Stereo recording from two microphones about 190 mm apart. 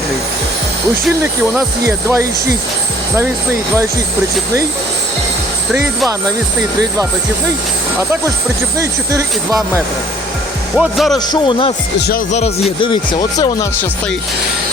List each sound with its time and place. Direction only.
1.0 s speech: 10° right (ahead or behind)
8.8 s speech: 15° right (ahead or behind)
10.8 s speech: centre (ahead or behind)
11.3 s speech: 25° left (ahead or behind)
11.9 s speech: 55° left (ahead or behind)
12.3 s speech: 35° left (ahead or behind); by 13.8 s 20° left (ahead or behind)